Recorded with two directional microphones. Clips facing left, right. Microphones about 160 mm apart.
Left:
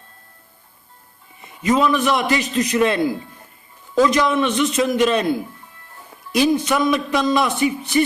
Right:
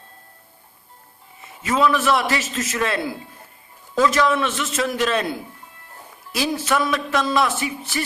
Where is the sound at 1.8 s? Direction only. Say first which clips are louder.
Left 1 dB; 15° left (ahead or behind).